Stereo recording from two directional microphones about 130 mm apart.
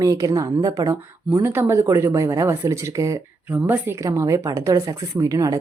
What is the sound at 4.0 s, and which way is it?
Speech, 25° right (ahead or behind).